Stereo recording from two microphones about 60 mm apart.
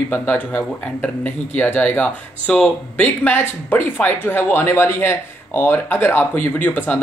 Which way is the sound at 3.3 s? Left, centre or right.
Left.